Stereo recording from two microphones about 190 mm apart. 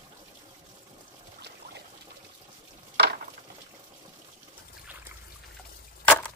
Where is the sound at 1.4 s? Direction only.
60° right (ahead or behind).